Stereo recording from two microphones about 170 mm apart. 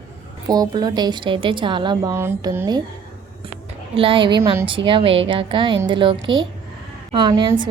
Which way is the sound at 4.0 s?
30° right (ahead or behind).